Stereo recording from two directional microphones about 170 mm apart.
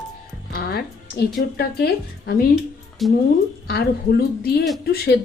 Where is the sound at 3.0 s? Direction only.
Centre (ahead or behind).